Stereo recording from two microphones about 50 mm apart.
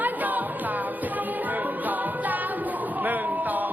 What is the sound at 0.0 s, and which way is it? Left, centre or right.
Music, right.